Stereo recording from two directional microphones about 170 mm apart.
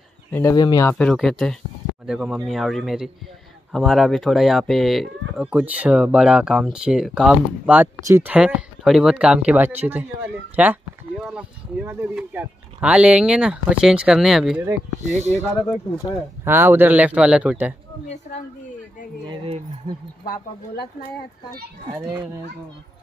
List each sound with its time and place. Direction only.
0.3 s speech: 15° left (ahead or behind)
0.9 s speech: 5° left (ahead or behind)
15.0 s speech: 40° right (ahead or behind)
16.4 s a man's voice: 15° right (ahead or behind)
19.2 s speech: 35° right (ahead or behind)